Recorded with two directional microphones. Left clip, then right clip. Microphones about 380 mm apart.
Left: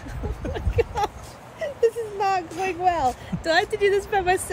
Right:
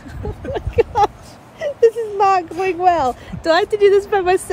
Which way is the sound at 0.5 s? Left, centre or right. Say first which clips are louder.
Right 9 dB; centre.